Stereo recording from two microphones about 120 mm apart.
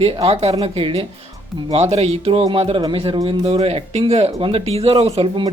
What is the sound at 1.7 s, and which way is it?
Speech, 60° right (ahead or behind).